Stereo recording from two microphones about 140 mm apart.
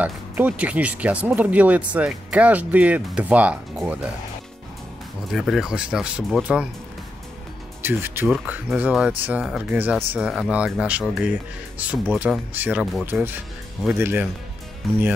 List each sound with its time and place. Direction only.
0.0 s speech: 10° right (ahead or behind)
5.3 s speech: centre (ahead or behind)
7.8 s speech: 15° right (ahead or behind)